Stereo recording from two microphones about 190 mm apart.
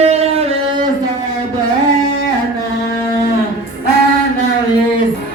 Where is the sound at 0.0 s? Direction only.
35° right (ahead or behind).